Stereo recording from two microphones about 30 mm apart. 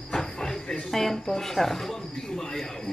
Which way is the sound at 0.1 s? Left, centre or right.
Left.